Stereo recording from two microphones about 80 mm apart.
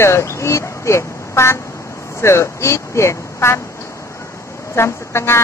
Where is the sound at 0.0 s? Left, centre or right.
Left.